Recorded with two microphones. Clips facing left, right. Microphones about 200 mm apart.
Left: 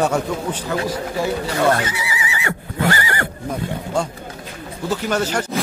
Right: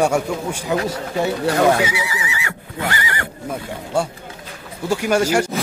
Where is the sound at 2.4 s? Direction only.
40° left (ahead or behind).